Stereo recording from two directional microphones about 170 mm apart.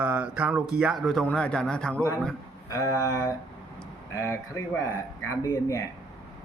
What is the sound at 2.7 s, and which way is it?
Speech, 20° left (ahead or behind).